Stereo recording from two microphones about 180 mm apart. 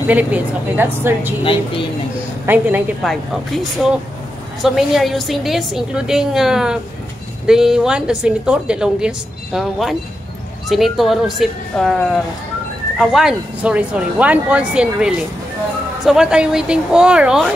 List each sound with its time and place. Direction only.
0.0 s speech: 10° right (ahead or behind)
1.4 s speech: 30° left (ahead or behind)
2.4 s speech: 10° right (ahead or behind)
3.1 s a woman's voice: centre (ahead or behind)